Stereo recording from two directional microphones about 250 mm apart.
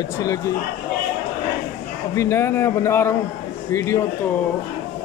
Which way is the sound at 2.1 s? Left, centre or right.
Centre.